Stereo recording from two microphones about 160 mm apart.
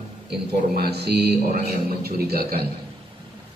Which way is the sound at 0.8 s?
90° right.